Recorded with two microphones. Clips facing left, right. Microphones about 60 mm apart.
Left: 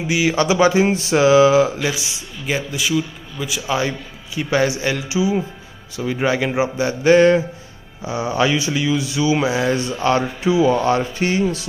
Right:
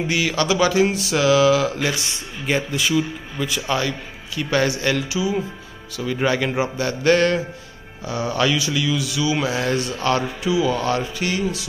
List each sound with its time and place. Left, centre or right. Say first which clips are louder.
0.0 s speech: left 3 dB; centre
2.4 s a man's voice: right 1 dB; centre
4.4 s a man's voice: left 2 dB; centre